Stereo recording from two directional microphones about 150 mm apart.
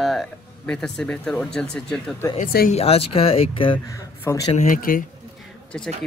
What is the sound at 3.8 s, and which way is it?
Speech, 20° left (ahead or behind).